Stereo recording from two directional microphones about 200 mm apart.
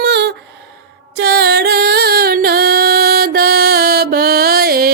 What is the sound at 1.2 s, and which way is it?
Music, 55° right (ahead or behind).